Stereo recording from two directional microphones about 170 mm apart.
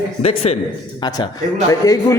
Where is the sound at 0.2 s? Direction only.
35° left (ahead or behind).